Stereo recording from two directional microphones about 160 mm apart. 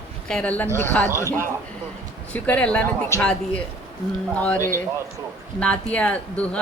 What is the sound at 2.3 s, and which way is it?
A woman's voice, 10° left (ahead or behind).